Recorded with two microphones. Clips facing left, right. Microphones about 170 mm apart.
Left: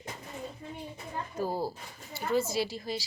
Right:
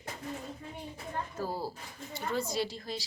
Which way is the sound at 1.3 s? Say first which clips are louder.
Left 7 dB; 15° left (ahead or behind).